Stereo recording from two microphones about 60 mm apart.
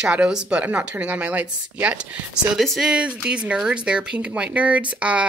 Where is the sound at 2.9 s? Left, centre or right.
Centre.